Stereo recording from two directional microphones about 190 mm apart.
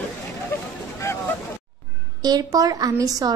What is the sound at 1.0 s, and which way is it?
Vehicle, 15° left (ahead or behind).